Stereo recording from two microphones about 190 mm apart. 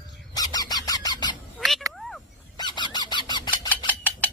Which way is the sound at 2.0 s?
Centre (ahead or behind).